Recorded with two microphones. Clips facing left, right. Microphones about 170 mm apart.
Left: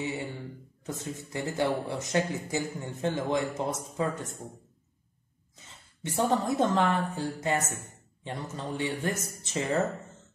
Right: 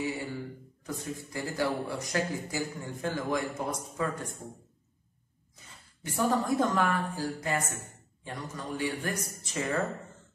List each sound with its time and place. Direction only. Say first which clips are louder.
0.0 s a sound: even; 25° left (ahead or behind)
0.8 s a man's voice: even; 25° left (ahead or behind)
5.7 s a man's voice: left 3 dB; 25° left (ahead or behind)